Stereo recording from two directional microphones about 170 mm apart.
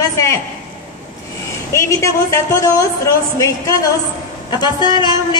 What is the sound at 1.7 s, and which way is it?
A woman's voice, 15° left (ahead or behind).